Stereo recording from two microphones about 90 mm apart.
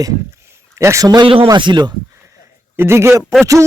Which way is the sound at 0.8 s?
35° right (ahead or behind).